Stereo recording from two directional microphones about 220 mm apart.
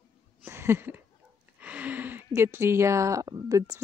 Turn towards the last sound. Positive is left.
turn(degrees=-15)  # may be behind; listen again after turning